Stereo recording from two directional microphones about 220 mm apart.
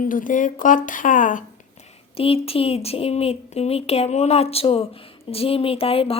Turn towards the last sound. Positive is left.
turn(degrees=25)  # may be behind; listen again after turning